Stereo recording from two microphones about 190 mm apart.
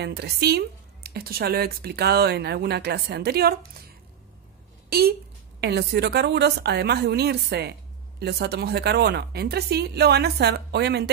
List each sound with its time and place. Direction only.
0.0 s speech: 60° right (ahead or behind)
4.8 s a sound: 55° right (ahead or behind)
5.6 s speech: 60° right (ahead or behind)